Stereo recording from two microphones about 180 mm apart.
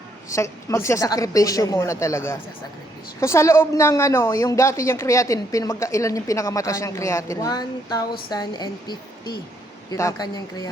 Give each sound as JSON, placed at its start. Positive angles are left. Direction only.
{"t": 0.3, "sound": "a woman's voice", "side_deg": 15}